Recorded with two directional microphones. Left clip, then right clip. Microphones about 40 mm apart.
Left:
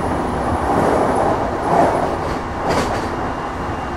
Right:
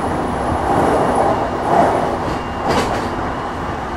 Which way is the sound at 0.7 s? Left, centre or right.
Right.